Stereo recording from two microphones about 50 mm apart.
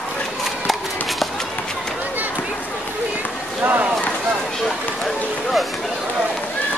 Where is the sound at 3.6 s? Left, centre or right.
Right.